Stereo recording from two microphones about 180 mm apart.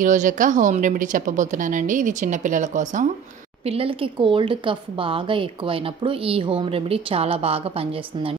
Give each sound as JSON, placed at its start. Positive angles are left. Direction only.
{"t": 0.0, "sound": "a woman's voice", "side_deg": -45}
{"t": 3.6, "sound": "speech", "side_deg": -30}